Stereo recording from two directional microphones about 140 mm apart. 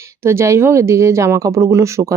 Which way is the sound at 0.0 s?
20° right (ahead or behind).